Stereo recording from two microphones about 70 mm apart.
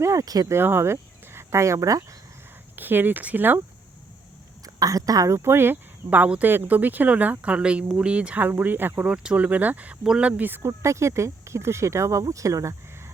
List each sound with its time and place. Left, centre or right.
0.0 s speech: right
0.4 s speech: right
2.7 s speech: right
4.6 s a woman's voice: right
5.4 s speech: right
9.0 s speech: centre
10.0 s speech: centre
10.2 s speech: right
10.7 s speech: right